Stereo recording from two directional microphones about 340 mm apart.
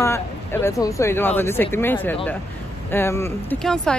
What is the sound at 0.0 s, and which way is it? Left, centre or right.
Speech, centre.